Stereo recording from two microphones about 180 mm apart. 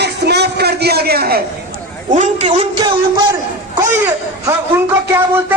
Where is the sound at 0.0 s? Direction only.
65° right (ahead or behind).